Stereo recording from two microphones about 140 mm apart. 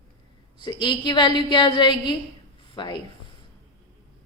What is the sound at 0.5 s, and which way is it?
Speech, 35° left (ahead or behind).